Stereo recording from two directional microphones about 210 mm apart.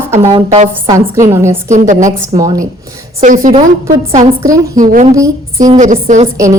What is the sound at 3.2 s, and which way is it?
Speech, 40° right (ahead or behind).